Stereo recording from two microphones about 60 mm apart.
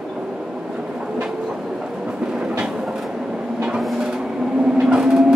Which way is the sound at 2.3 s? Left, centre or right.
Centre.